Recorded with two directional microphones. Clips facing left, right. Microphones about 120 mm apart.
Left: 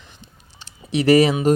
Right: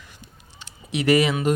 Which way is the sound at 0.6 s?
30° left (ahead or behind).